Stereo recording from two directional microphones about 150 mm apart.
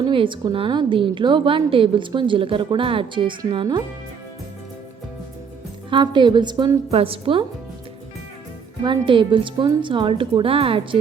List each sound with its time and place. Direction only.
0.0 s a woman's voice: 35° right (ahead or behind)
5.9 s a woman's voice: 30° right (ahead or behind)
8.8 s a woman's voice: 30° right (ahead or behind)